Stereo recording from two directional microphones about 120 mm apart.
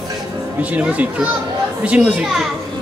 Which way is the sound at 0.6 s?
10° right (ahead or behind).